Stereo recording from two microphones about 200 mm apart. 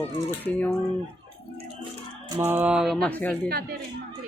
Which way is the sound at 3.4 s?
50° right (ahead or behind).